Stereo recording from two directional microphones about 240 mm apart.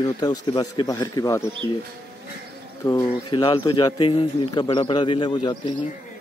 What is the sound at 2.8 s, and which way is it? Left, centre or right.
A man's voice, centre.